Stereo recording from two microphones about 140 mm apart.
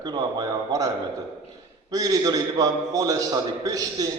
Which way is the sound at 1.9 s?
25° right (ahead or behind).